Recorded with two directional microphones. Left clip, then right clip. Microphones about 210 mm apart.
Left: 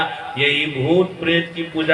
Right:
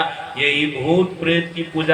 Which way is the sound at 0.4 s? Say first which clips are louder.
Even; 20° right (ahead or behind).